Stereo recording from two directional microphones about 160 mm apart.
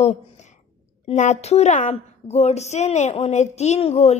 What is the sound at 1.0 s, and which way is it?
A woman's voice, 45° left (ahead or behind).